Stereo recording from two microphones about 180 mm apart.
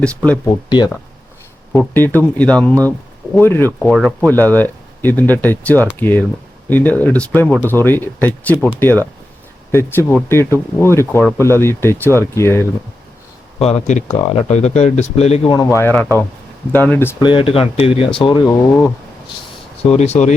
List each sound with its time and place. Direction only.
0.4 s speech: 25° left (ahead or behind)
1.8 s speech: 10° left (ahead or behind)
3.8 s speech: centre (ahead or behind)
13.6 s speech: 35° left (ahead or behind)
15.5 s speech: 15° left (ahead or behind)
17.2 s speech: 25° left (ahead or behind)
18.4 s speech: 10° left (ahead or behind)
19.8 s speech: 35° left (ahead or behind)